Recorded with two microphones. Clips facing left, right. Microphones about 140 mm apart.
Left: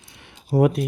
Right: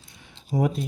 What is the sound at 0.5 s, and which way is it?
Speech, 65° left (ahead or behind).